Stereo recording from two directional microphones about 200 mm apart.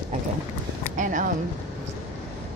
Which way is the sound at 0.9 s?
40° right (ahead or behind).